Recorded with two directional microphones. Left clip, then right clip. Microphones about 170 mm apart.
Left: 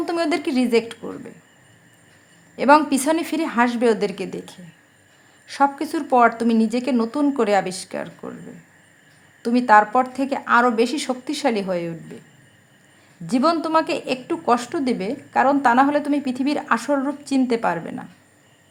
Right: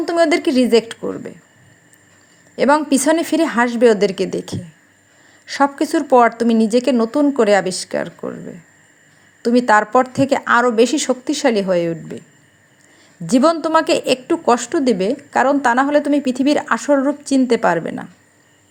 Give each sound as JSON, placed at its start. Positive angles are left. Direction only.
{"t": 0.0, "sound": "a woman's voice", "side_deg": -20}
{"t": 2.6, "sound": "a woman's voice", "side_deg": -20}
{"t": 9.4, "sound": "a woman's voice", "side_deg": -20}
{"t": 13.2, "sound": "a woman's voice", "side_deg": -25}